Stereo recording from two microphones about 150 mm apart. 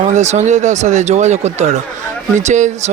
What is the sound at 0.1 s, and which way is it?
Speech, 50° right (ahead or behind).